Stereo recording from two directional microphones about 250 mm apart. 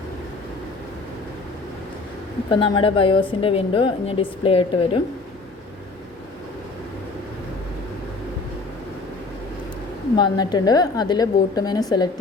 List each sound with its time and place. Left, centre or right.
2.5 s a woman's voice: left
10.2 s a woman's voice: centre